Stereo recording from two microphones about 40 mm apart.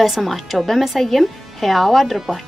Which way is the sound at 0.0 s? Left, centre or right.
Centre.